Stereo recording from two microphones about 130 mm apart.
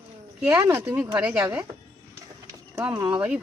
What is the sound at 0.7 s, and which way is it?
Speech, 20° right (ahead or behind).